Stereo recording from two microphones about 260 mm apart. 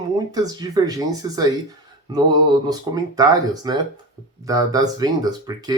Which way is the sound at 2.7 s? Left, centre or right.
Centre.